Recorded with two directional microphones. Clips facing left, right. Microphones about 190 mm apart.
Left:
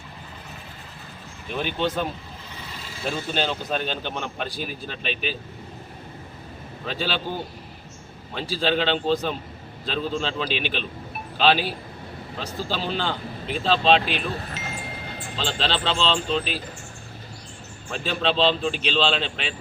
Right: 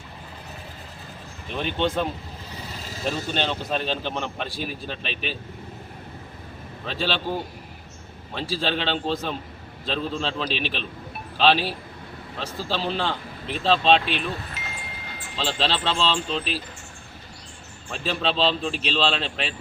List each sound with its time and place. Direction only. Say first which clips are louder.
1.5 s a man's voice: right 1 dB; centre (ahead or behind)
6.8 s a man's voice: right 1 dB; centre (ahead or behind)
15.4 s a man's voice: right 1 dB; centre (ahead or behind)
17.9 s a man's voice: left 2 dB; centre (ahead or behind)